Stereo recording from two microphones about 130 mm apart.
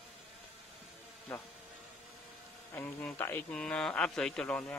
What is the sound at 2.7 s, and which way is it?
Speech, 15° left (ahead or behind).